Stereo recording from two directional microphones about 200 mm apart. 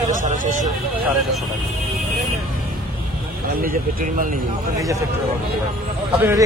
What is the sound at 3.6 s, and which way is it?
Speech, 45° right (ahead or behind).